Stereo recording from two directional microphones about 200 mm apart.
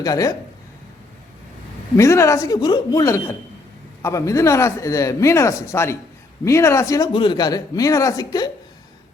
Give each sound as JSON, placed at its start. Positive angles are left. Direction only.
{"t": 0.0, "sound": "speech", "side_deg": 15}
{"t": 2.0, "sound": "speech", "side_deg": 15}